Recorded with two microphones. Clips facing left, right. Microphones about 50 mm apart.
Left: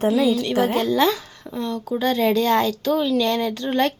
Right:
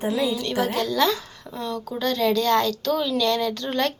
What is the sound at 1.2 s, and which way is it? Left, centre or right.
Speech, centre.